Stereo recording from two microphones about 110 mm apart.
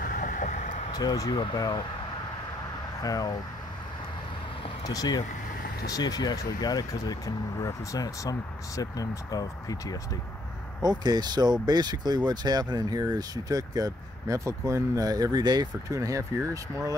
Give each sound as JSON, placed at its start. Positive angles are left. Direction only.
{"t": 0.5, "sound": "vehicle", "side_deg": 90}
{"t": 0.9, "sound": "speech", "side_deg": 35}
{"t": 3.0, "sound": "speech", "side_deg": 35}
{"t": 4.8, "sound": "speech", "side_deg": 35}
{"t": 10.8, "sound": "speech", "side_deg": -40}